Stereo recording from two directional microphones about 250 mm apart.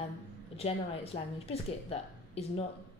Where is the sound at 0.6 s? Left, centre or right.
Left.